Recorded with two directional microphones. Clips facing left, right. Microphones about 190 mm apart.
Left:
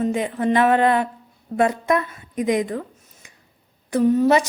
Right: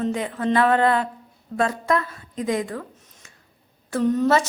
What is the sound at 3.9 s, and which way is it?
Speech, 10° left (ahead or behind).